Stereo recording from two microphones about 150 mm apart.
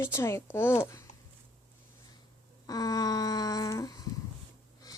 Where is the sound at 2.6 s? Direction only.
25° left (ahead or behind).